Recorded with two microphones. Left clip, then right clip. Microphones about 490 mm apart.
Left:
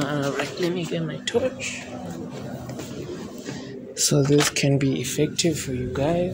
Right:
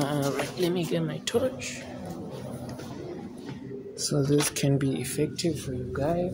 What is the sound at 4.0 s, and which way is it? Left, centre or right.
Speech, right.